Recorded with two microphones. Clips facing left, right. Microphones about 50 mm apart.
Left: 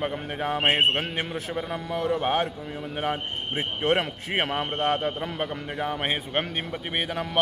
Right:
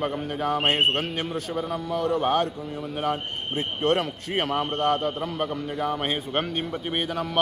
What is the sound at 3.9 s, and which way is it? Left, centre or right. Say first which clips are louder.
A man's voice: even; left.